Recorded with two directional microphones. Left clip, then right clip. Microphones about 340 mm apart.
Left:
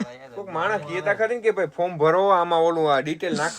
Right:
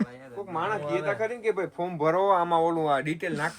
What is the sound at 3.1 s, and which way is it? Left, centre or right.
Speech, centre.